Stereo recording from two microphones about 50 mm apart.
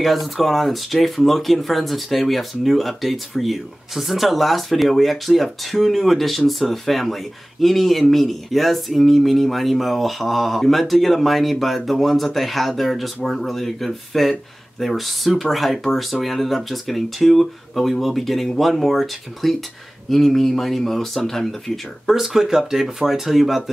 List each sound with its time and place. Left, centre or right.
0.0 s speech: centre
22.1 s speech: centre